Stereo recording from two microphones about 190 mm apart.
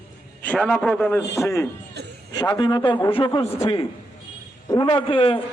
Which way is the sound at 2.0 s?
60° right (ahead or behind).